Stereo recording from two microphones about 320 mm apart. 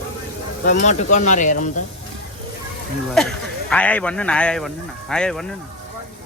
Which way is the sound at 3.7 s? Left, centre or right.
Centre.